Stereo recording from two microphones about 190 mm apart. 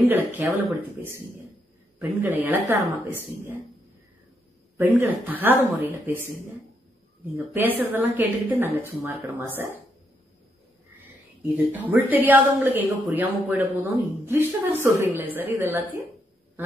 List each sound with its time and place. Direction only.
0.1 s a woman's voice: 10° right (ahead or behind)
4.7 s a woman's voice: 10° right (ahead or behind)
7.3 s a woman's voice: 10° right (ahead or behind)
11.5 s a woman's voice: 10° right (ahead or behind)